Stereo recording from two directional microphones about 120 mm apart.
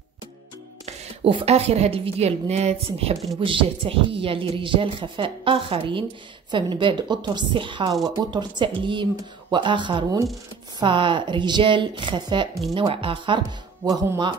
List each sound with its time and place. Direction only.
0.8 s a woman's voice: 55° right (ahead or behind)
3.3 s speech: 45° right (ahead or behind)
13.4 s speech: 30° right (ahead or behind)